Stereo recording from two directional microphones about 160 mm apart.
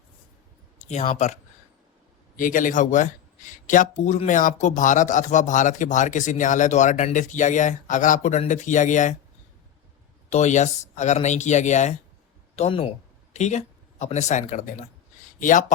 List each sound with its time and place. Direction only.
0.9 s speech: 40° left (ahead or behind)
2.3 s speech: 55° left (ahead or behind)
10.2 s speech: 45° left (ahead or behind)